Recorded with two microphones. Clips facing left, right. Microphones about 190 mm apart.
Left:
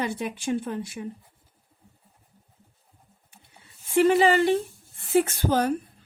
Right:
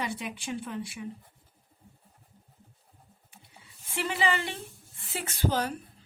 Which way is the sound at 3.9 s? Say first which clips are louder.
Left 11 dB; 45° left (ahead or behind).